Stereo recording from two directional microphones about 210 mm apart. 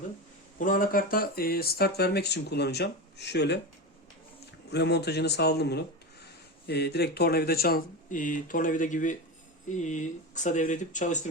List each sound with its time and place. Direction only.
0.6 s speech: 40° left (ahead or behind)
4.7 s speech: 55° left (ahead or behind); by 11.2 s 35° left (ahead or behind)